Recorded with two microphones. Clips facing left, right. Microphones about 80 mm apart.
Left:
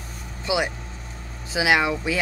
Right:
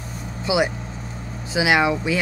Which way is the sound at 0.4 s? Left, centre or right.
Centre.